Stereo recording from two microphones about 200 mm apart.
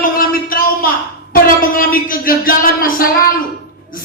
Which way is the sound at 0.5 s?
45° left (ahead or behind).